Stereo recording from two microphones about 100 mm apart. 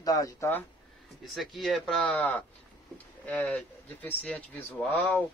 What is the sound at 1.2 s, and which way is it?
Speech, centre (ahead or behind).